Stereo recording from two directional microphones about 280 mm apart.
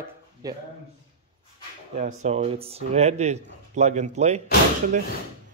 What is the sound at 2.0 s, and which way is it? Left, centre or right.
Speech, right.